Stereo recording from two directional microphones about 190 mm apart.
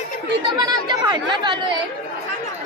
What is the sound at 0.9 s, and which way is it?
Speech, 25° right (ahead or behind).